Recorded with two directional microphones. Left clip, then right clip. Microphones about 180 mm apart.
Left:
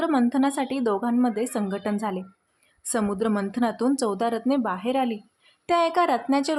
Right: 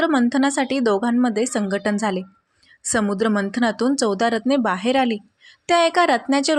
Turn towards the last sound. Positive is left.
turn(degrees=-10)  # may be behind; listen again after turning